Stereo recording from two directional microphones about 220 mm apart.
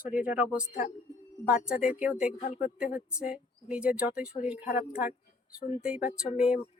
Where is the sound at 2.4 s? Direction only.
30° left (ahead or behind).